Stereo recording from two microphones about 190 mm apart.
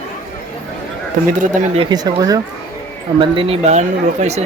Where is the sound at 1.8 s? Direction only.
20° right (ahead or behind).